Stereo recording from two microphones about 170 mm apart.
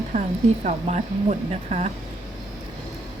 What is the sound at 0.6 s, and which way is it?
Speech, 45° right (ahead or behind).